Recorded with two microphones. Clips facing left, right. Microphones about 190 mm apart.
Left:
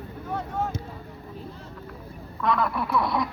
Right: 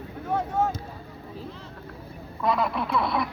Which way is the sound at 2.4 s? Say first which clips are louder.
Even; 20° right (ahead or behind).